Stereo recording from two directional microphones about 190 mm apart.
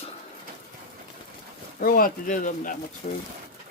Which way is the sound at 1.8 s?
50° left (ahead or behind).